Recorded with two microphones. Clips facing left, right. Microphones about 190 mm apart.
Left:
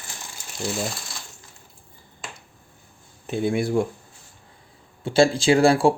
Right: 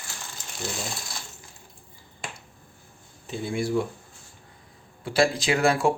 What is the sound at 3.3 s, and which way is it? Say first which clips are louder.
Speech: left 6 dB; 60° left (ahead or behind).